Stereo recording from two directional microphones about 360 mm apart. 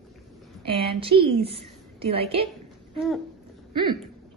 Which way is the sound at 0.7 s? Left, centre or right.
Centre.